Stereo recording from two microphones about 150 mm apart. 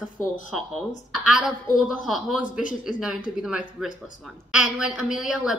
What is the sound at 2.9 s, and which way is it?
A woman's voice, 5° right (ahead or behind).